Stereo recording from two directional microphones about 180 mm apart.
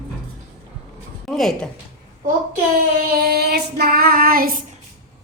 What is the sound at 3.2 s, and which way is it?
Child singing, 60° right (ahead or behind).